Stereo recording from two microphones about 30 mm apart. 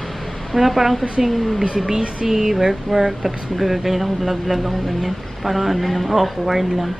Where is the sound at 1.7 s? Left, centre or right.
Centre.